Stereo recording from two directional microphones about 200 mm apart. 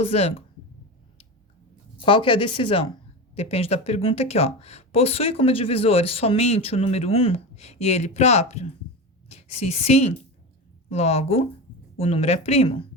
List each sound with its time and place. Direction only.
0.0 s speech: 30° left (ahead or behind)
2.0 s a woman's voice: 25° left (ahead or behind)